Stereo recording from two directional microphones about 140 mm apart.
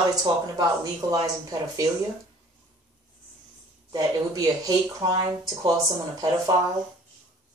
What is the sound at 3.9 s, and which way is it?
Speech, 25° right (ahead or behind).